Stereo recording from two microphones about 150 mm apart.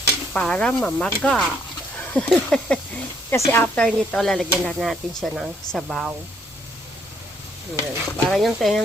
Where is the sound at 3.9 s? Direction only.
5° left (ahead or behind).